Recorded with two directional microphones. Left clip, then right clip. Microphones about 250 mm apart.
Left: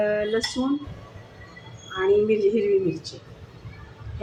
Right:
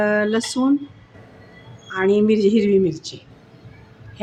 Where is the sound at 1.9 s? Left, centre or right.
Right.